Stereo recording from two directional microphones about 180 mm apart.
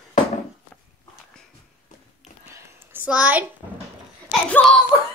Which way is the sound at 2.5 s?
10° right (ahead or behind).